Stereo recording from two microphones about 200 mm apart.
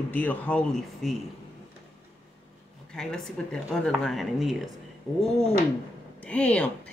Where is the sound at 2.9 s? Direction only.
5° left (ahead or behind).